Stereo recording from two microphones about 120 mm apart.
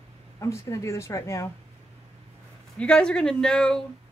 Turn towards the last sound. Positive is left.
turn(degrees=5)  # may be behind; listen again after turning